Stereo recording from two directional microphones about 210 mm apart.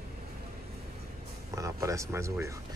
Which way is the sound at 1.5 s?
15° right (ahead or behind).